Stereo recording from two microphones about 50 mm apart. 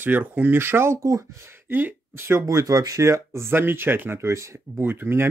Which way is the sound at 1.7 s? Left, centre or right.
Right.